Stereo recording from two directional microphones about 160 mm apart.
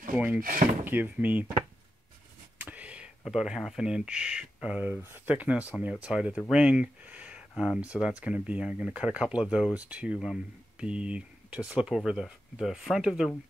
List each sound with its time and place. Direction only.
0.1 s drawer open or close: 10° right (ahead or behind)
0.4 s speech: 60° right (ahead or behind)
0.8 s speech: 10° right (ahead or behind)
2.6 s speech: 10° right (ahead or behind)